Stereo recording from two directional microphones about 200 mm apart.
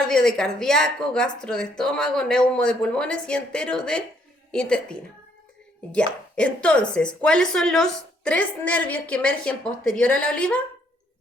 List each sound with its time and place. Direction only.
0.1 s a woman's voice: 5° left (ahead or behind)